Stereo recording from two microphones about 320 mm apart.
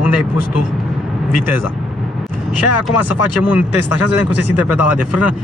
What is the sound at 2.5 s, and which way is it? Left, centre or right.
Speech, left.